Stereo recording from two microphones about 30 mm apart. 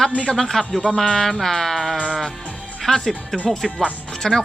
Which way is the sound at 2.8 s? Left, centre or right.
Centre.